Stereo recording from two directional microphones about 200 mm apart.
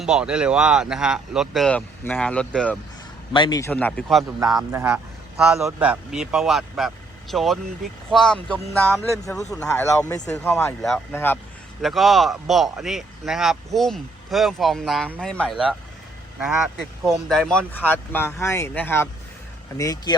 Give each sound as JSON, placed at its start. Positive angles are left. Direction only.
{"t": 0.0, "sound": "speech", "side_deg": -5}
{"t": 3.3, "sound": "speech", "side_deg": 20}
{"t": 4.7, "sound": "a man's voice", "side_deg": -10}
{"t": 10.3, "sound": "speech", "side_deg": 5}
{"t": 11.8, "sound": "speech", "side_deg": 0}
{"t": 17.1, "sound": "speech", "side_deg": 0}